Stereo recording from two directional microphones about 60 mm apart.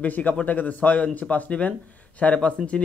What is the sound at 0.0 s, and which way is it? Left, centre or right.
Speech, left.